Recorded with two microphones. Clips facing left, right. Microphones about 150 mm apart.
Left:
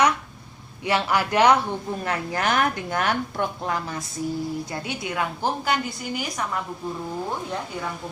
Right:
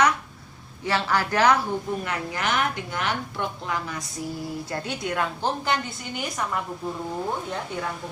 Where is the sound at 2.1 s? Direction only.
45° left (ahead or behind).